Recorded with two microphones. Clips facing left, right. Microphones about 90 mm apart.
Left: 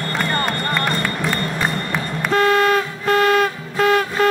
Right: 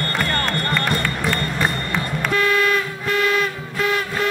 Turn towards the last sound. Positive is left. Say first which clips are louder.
# left 5 dB
turn(degrees=35)  # may be behind; listen again after turning